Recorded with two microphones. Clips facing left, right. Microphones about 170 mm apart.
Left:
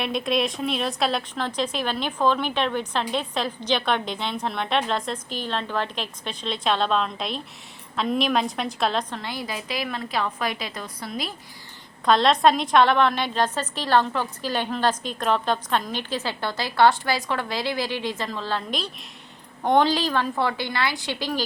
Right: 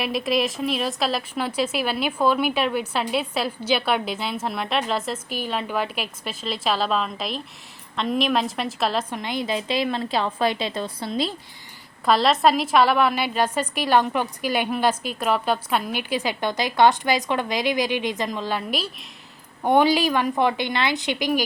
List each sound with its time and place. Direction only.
0.0 s a woman's voice: 5° right (ahead or behind); by 11.3 s 25° right (ahead or behind)
12.0 s a woman's voice: 5° right (ahead or behind)